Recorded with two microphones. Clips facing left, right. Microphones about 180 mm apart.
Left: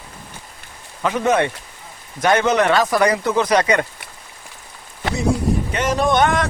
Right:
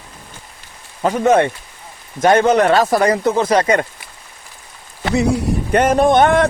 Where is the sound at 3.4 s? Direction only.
25° right (ahead or behind).